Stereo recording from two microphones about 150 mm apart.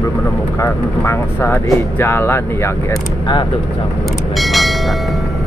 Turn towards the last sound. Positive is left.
turn(degrees=0)  # may be behind; listen again after turning